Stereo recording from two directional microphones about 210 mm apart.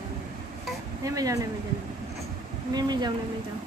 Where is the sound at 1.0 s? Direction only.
15° right (ahead or behind).